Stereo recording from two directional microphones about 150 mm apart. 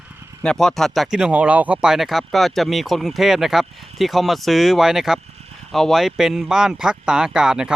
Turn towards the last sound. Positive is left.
turn(degrees=-5)  # may be behind; listen again after turning